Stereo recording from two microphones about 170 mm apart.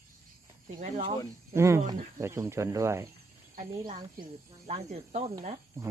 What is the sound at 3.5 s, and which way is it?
Speech, 50° right (ahead or behind).